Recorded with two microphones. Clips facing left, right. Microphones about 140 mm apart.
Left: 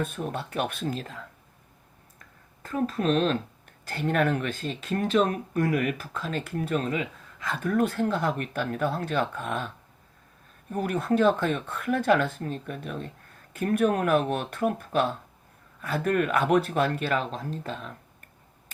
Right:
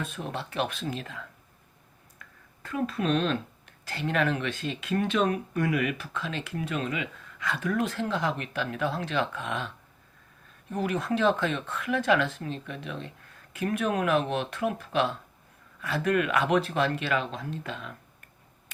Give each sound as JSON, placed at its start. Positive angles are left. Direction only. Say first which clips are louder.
{"t": 0.0, "sound": "speech", "louder": "left 4 dB", "side_deg": 50}
{"t": 2.6, "sound": "speech", "louder": "left 2 dB", "side_deg": 40}
{"t": 10.7, "sound": "speech", "louder": "left 2 dB", "side_deg": 50}